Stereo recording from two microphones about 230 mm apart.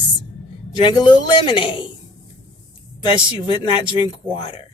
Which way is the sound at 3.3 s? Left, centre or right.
Left.